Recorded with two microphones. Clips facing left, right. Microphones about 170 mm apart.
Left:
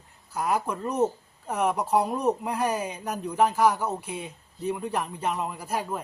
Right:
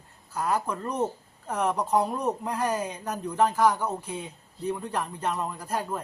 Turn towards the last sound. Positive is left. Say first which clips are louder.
# even
turn(degrees=10)  # may be behind; listen again after turning